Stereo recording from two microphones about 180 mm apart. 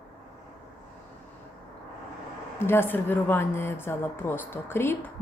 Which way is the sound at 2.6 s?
10° left (ahead or behind).